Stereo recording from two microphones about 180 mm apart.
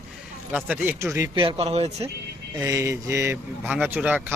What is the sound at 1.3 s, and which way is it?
Speech, 30° right (ahead or behind).